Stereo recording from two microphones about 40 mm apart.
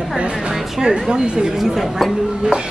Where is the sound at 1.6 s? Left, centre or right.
Centre.